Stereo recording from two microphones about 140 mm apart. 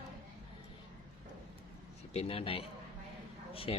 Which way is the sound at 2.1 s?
45° left (ahead or behind).